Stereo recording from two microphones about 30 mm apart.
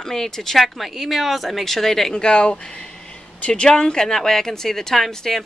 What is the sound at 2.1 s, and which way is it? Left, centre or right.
Speech, left.